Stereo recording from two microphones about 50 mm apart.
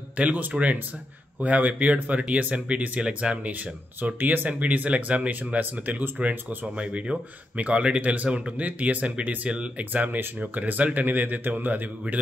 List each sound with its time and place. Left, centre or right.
0.2 s speech: right
4.0 s speech: right
6.1 s speech: right